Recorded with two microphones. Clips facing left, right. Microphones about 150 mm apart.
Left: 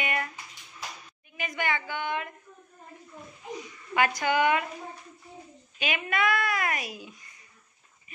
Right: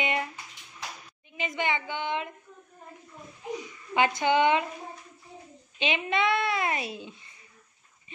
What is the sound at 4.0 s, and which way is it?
Speech, 25° right (ahead or behind).